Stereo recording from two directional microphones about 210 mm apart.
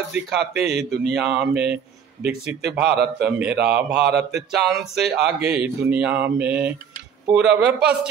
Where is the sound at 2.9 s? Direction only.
50° right (ahead or behind).